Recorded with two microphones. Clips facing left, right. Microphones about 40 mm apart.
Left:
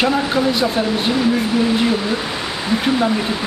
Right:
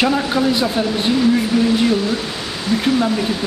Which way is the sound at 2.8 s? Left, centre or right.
Centre.